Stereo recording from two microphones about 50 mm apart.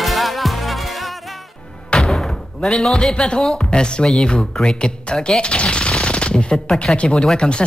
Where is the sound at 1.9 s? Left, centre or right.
Centre.